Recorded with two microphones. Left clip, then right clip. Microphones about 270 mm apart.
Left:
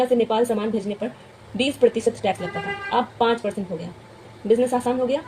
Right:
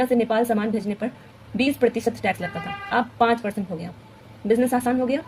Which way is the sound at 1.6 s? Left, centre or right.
Right.